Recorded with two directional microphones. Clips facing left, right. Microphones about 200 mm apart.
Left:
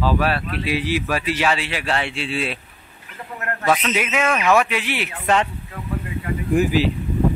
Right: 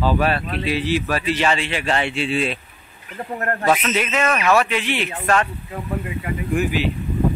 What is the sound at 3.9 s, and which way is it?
Speech, 10° left (ahead or behind).